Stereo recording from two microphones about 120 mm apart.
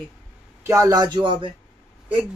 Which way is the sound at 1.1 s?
40° right (ahead or behind).